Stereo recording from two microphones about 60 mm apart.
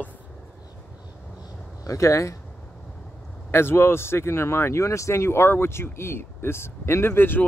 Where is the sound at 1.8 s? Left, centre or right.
Left.